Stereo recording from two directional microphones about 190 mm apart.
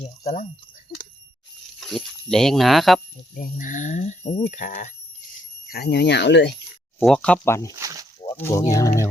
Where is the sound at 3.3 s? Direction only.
45° left (ahead or behind).